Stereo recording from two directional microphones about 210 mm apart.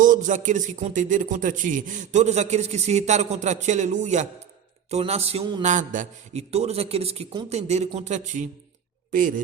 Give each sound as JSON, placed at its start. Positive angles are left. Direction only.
{"t": 0.0, "sound": "a man's voice", "side_deg": -40}